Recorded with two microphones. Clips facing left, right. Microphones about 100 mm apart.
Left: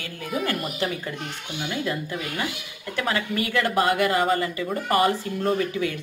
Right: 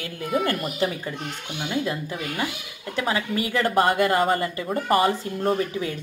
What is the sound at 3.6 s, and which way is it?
Speech, 35° right (ahead or behind).